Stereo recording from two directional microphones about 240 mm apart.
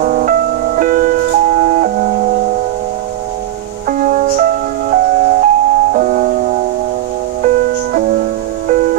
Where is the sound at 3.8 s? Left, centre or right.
Right.